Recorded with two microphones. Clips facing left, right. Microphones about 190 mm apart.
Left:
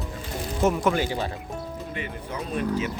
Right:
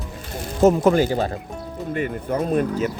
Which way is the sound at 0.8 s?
40° right (ahead or behind).